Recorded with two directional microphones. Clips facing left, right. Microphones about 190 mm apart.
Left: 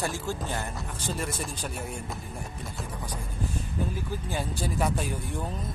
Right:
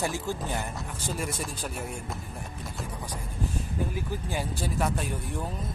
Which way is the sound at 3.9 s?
15° right (ahead or behind).